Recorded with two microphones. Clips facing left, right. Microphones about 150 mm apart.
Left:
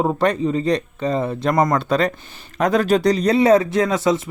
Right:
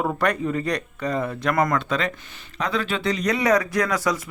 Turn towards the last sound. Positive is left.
turn(degrees=25)  # may be behind; listen again after turning